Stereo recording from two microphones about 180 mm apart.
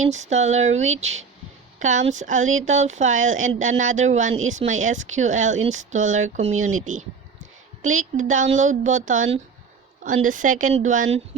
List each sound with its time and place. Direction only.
0.1 s speech: 40° right (ahead or behind)